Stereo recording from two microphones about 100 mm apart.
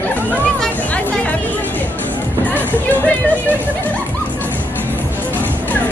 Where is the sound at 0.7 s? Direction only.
15° left (ahead or behind).